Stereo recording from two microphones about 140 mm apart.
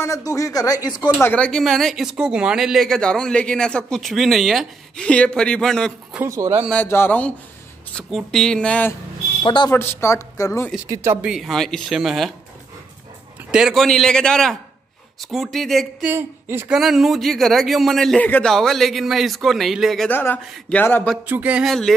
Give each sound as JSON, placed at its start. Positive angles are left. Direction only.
{"t": 0.0, "sound": "a woman's voice", "side_deg": 25}
{"t": 1.2, "sound": "speech", "side_deg": 10}
{"t": 6.1, "sound": "speech", "side_deg": -20}
{"t": 6.7, "sound": "speech", "side_deg": 15}
{"t": 9.4, "sound": "a woman's voice", "side_deg": 35}
{"t": 9.8, "sound": "a woman's voice", "side_deg": 20}
{"t": 10.9, "sound": "speech", "side_deg": -20}
{"t": 11.2, "sound": "speech", "side_deg": 0}
{"t": 13.5, "sound": "speech", "side_deg": -5}
{"t": 16.1, "sound": "speech", "side_deg": -15}
{"t": 16.7, "sound": "speech", "side_deg": 0}
{"t": 20.1, "sound": "speech", "side_deg": 15}
{"t": 21.3, "sound": "speech", "side_deg": -10}